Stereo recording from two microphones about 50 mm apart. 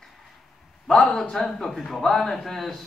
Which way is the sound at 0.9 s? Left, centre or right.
Left.